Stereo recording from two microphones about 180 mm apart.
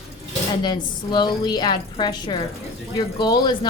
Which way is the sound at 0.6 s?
25° left (ahead or behind).